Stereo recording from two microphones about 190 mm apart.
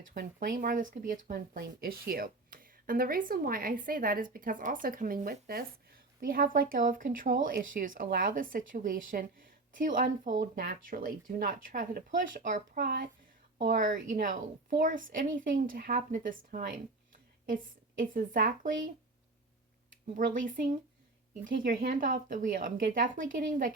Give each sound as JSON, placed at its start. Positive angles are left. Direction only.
{"t": 0.1, "sound": "a woman's voice", "side_deg": -50}
{"t": 20.1, "sound": "speech", "side_deg": -45}